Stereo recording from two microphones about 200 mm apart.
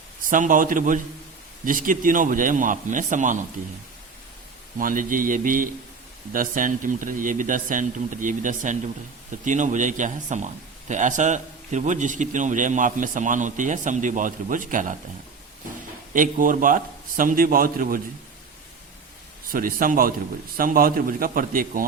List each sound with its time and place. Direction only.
0.3 s a man's voice: 40° right (ahead or behind)
4.8 s a man's voice: 45° right (ahead or behind)
16.1 s a man's voice: 40° right (ahead or behind)
19.5 s a man's voice: 45° right (ahead or behind)